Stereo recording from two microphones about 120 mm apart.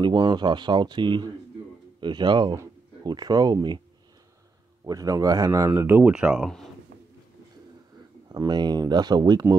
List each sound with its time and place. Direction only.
0.0 s speech: 40° right (ahead or behind)
4.8 s speech: 30° right (ahead or behind)
5.7 s speech: 20° right (ahead or behind)
8.3 s speech: 35° right (ahead or behind)